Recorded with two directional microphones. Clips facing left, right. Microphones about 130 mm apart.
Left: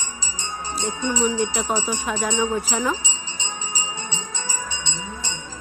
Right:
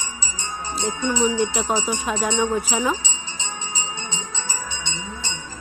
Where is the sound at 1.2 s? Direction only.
20° right (ahead or behind).